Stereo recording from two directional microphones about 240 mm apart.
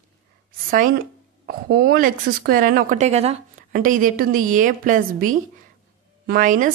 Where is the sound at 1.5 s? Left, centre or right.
Right.